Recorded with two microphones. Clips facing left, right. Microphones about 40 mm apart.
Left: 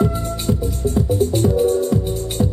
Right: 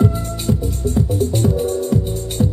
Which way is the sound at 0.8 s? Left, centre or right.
Left.